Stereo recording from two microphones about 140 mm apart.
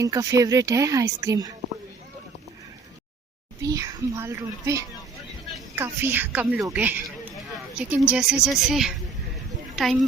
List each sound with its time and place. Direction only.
0.0 s speech: 25° right (ahead or behind)
3.6 s a woman's voice: 25° right (ahead or behind); by 10.0 s centre (ahead or behind)